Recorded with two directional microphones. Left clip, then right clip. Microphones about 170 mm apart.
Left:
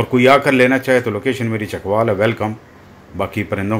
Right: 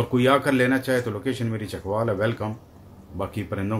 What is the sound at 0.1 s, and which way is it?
Speech, 10° left (ahead or behind).